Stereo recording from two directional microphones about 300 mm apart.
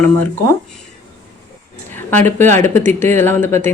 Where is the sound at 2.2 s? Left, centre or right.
Centre.